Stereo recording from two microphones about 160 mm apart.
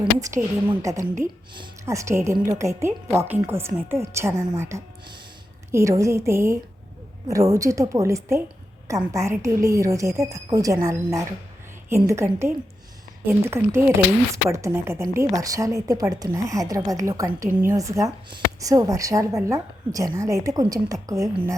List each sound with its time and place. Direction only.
0.8 s a woman's voice: 20° right (ahead or behind)